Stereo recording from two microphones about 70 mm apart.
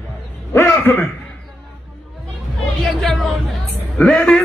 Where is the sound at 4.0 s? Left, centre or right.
Centre.